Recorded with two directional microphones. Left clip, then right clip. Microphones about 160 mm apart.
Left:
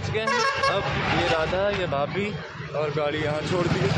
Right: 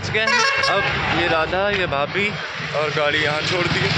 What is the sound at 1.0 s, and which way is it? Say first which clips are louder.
Speech: right 4 dB; 40° right (ahead or behind).